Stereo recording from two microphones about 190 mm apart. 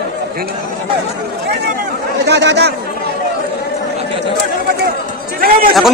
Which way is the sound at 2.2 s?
65° right (ahead or behind).